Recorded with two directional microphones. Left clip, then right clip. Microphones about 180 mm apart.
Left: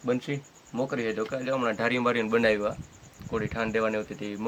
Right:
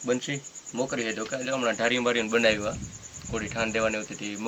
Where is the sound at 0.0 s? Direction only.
70° left (ahead or behind).